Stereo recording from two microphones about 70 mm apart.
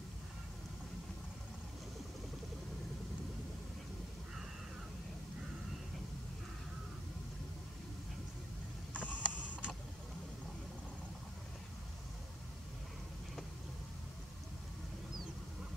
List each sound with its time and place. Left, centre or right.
8.9 s mechanisms: left
9.2 s mechanisms: centre